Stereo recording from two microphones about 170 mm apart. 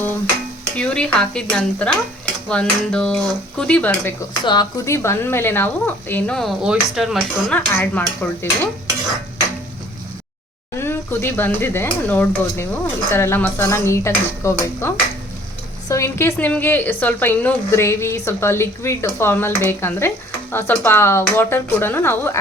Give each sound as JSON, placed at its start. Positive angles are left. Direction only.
{"t": 0.8, "sound": "speech", "side_deg": 5}
{"t": 4.4, "sound": "a woman's voice", "side_deg": 20}
{"t": 7.8, "sound": "a woman's voice", "side_deg": 10}
{"t": 10.8, "sound": "a woman's voice", "side_deg": 15}